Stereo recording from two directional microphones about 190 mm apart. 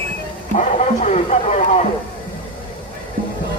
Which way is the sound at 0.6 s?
40° left (ahead or behind).